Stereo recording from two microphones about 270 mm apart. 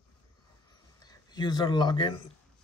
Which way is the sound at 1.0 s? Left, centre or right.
Centre.